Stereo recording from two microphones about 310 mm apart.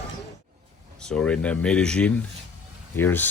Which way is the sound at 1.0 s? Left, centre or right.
Centre.